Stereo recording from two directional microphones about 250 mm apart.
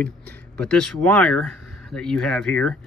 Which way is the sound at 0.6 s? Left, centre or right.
Centre.